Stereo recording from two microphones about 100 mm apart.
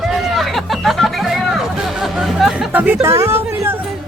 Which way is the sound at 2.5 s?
15° right (ahead or behind).